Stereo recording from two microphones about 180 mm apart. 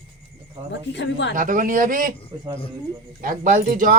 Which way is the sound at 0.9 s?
75° left (ahead or behind).